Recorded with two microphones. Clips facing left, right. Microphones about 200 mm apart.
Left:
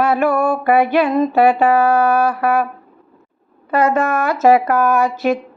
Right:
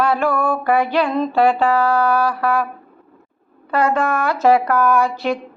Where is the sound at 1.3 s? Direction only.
10° left (ahead or behind).